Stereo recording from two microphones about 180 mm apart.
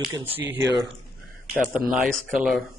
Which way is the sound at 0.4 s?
10° right (ahead or behind).